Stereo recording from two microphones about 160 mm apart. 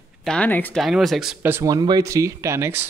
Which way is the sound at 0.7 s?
Centre (ahead or behind).